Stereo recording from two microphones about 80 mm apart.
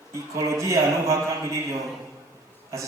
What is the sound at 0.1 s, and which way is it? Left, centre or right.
A man's voice, right.